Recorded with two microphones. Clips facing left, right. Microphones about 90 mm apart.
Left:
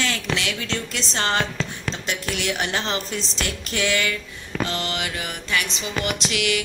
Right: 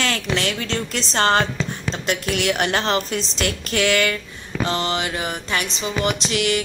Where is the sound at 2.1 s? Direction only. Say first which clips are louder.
Right 6 dB; 60° right (ahead or behind).